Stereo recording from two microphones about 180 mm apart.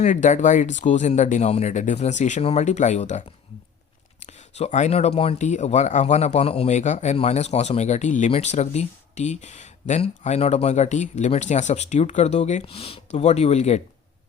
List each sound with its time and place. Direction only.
0.0 s speech: 45° left (ahead or behind)